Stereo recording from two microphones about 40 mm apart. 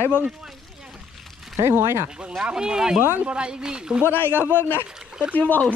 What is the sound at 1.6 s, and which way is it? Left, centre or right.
Speech, right.